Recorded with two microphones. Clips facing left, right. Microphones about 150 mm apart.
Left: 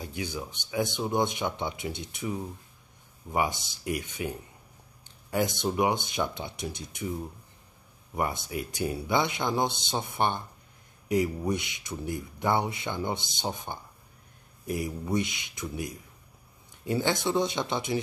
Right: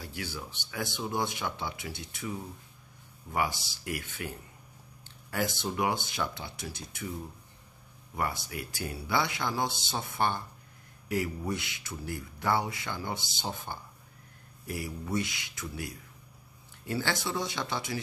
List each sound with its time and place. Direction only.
0.0 s speech: 20° left (ahead or behind)
5.0 s a sound: 20° left (ahead or behind)
5.8 s speech: 20° left (ahead or behind)
8.2 s speech: 20° left (ahead or behind)